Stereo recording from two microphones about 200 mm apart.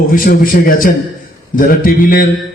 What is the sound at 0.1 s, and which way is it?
A man's voice, 45° left (ahead or behind).